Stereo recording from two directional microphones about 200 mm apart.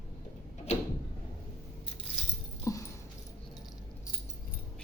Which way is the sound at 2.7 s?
15° left (ahead or behind).